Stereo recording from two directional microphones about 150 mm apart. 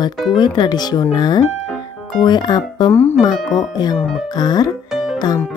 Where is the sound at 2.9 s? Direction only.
15° left (ahead or behind).